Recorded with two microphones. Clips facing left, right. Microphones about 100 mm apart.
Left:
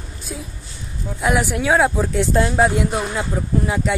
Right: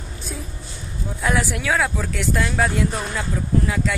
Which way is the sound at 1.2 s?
20° left (ahead or behind).